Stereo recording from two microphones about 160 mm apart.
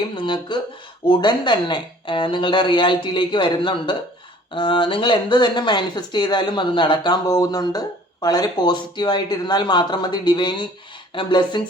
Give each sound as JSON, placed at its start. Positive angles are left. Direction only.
{"t": 0.2, "sound": "speech", "side_deg": 30}